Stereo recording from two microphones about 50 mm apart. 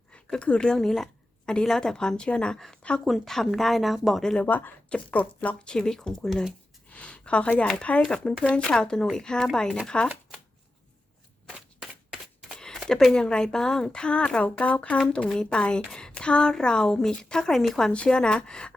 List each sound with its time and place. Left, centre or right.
0.1 s a woman's voice: left
0.8 s a sound: centre
1.6 s a woman's voice: centre
3.0 s speech: centre
4.4 s speech: left
5.6 s a woman's voice: centre
6.9 s a woman's voice: left
8.0 s a woman's voice: centre
11.8 s a sound: centre
12.5 s a sound: centre
13.1 s a woman's voice: centre
17.9 s a woman's voice: left